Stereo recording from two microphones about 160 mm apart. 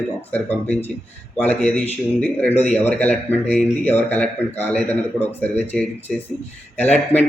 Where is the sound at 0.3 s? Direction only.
10° left (ahead or behind).